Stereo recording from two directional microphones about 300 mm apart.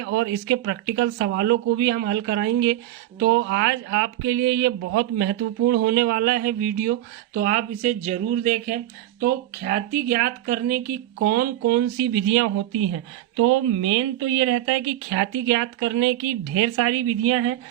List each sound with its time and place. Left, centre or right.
0.0 s speech: right